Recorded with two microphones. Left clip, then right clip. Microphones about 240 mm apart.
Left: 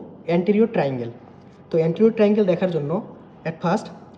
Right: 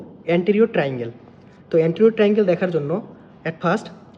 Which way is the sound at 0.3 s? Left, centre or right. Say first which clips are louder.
Right 2 dB; centre.